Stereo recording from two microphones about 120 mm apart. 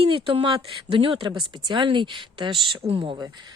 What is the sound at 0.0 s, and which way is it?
Speech, 55° right (ahead or behind).